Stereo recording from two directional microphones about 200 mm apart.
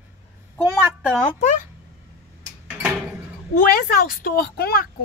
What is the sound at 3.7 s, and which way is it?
A woman's voice, 45° left (ahead or behind).